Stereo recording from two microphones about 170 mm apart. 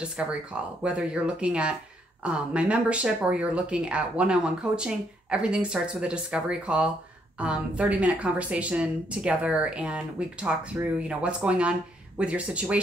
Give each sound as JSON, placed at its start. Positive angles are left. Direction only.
{"t": 0.0, "sound": "speech", "side_deg": -5}